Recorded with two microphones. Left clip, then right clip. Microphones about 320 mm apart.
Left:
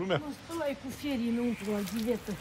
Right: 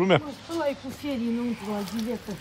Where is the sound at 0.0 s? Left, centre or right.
Centre.